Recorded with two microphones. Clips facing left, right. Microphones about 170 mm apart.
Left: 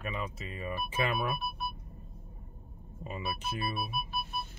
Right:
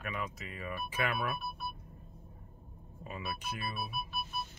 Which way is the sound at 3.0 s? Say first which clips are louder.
Left 3 dB; 25° left (ahead or behind).